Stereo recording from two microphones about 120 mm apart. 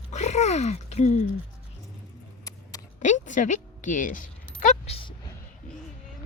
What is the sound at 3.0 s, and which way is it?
Speech, 90° left.